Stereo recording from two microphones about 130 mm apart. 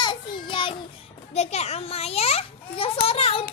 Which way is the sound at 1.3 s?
55° left (ahead or behind).